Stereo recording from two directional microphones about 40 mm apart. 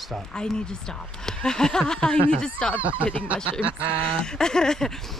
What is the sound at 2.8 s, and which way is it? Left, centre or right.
Speech, right.